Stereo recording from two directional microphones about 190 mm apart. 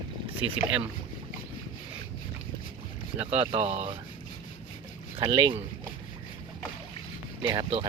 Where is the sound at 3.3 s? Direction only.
35° right (ahead or behind).